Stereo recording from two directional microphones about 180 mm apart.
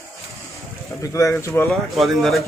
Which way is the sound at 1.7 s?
Centre (ahead or behind).